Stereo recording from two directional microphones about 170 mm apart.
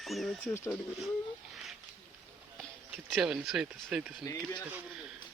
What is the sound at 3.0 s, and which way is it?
Speech, 5° right (ahead or behind).